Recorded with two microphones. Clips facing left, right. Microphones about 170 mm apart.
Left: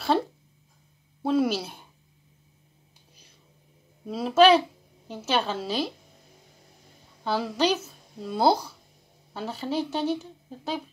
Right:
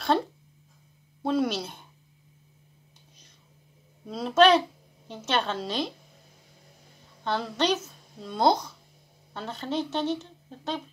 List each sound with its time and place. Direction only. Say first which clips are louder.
1.2 s speech: left 2 dB; 5° left (ahead or behind)
4.0 s a woman's voice: left 2 dB; 5° left (ahead or behind)
7.2 s speech: left 2 dB; 5° left (ahead or behind)